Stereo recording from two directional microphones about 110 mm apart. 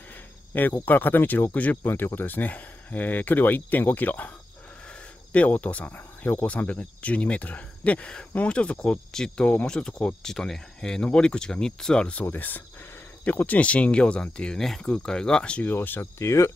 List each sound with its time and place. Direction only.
0.5 s speech: 15° left (ahead or behind)
5.3 s speech: 15° left (ahead or behind)